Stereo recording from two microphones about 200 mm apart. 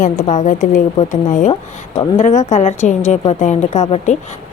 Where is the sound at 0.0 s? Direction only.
35° left (ahead or behind).